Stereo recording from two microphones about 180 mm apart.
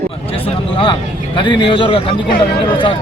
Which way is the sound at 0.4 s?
30° left (ahead or behind).